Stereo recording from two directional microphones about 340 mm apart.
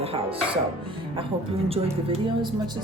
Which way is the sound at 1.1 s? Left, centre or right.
Centre.